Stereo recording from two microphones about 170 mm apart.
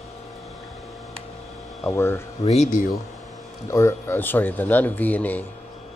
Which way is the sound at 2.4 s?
40° left (ahead or behind).